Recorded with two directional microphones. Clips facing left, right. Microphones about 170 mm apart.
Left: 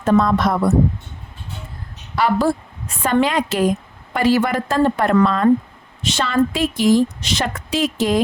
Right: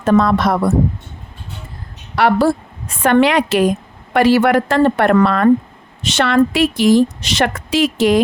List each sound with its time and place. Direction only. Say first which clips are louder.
0.0 s a woman's voice: right 2 dB; 80° right
2.1 s a woman's voice: right 4 dB; 70° right (ahead or behind)